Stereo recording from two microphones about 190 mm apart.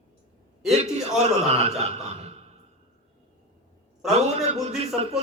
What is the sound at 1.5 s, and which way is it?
Speech, 35° right (ahead or behind).